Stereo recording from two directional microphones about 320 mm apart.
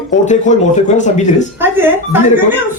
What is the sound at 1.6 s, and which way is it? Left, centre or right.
Speech, centre.